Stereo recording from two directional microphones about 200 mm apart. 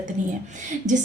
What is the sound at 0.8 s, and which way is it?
Speech, 35° right (ahead or behind).